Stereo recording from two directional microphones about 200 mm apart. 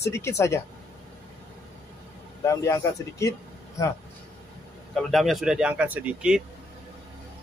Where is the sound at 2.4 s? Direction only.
15° left (ahead or behind).